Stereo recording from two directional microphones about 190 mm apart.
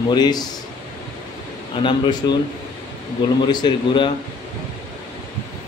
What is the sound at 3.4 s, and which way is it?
Speech, 25° left (ahead or behind).